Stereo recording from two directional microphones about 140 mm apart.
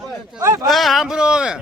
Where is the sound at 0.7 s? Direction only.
Centre (ahead or behind).